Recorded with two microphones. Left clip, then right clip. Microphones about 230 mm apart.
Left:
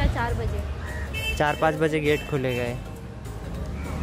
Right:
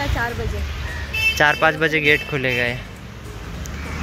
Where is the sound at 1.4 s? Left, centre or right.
Centre.